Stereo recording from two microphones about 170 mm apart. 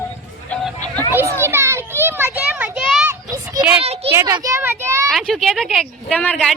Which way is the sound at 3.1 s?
20° right (ahead or behind).